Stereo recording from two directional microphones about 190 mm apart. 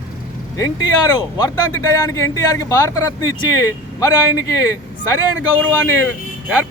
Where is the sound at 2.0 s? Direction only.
15° left (ahead or behind).